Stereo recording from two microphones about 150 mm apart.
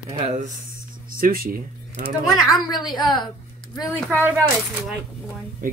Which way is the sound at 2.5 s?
30° left (ahead or behind).